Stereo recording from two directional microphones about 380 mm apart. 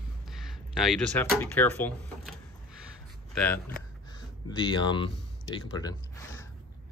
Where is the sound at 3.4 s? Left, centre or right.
Centre.